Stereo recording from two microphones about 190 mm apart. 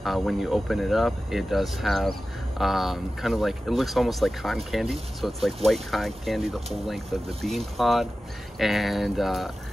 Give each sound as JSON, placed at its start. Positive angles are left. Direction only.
{"t": 0.0, "sound": "speech", "side_deg": 0}